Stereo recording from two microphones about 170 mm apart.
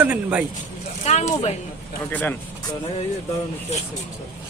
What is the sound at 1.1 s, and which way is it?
Speech, 40° left (ahead or behind).